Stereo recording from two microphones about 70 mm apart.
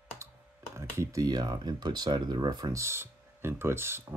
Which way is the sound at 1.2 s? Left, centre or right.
Right.